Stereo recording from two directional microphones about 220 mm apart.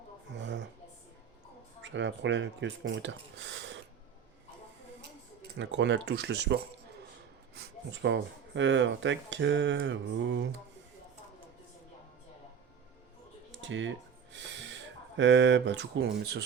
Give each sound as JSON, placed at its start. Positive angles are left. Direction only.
{"t": 0.3, "sound": "a sound", "side_deg": -55}
{"t": 1.8, "sound": "speech", "side_deg": -55}
{"t": 5.5, "sound": "speech", "side_deg": -55}
{"t": 13.5, "sound": "music", "side_deg": -55}
{"t": 14.3, "sound": "speech", "side_deg": -55}